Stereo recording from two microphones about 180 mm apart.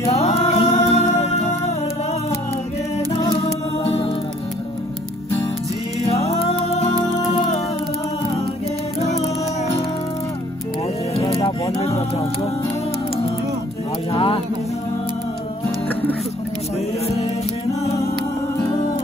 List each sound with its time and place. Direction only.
0.1 s music: 35° left (ahead or behind)
3.3 s music: 30° left (ahead or behind)
11.1 s music: 35° left (ahead or behind)
14.1 s a sound: 30° left (ahead or behind)
15.9 s music: 10° left (ahead or behind)